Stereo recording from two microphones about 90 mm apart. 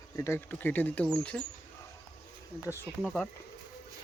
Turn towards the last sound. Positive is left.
turn(degrees=5)  # may be behind; listen again after turning